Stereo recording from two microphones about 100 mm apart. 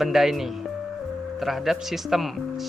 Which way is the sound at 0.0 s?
Centre (ahead or behind).